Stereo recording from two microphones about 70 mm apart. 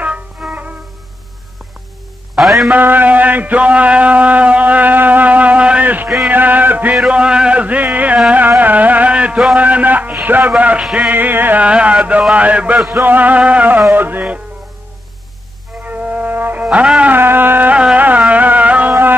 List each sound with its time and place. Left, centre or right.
0.0 s music: centre
2.3 s music: centre
2.7 s a sound: right
7.1 s a sound: centre
8.3 s carnatic music: right
9.6 s a sound: right
10.2 s speech: right
10.5 s a sound: centre
11.1 s speech: right
15.8 s music: right
17.9 s carnatic music: right
18.3 s music: right